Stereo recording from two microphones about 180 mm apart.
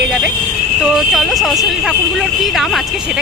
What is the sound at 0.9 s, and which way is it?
Speech, centre (ahead or behind).